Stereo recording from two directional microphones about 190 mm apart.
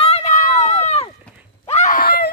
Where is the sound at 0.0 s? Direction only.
35° left (ahead or behind).